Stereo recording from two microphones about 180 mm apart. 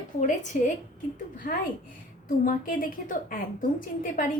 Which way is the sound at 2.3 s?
50° left (ahead or behind).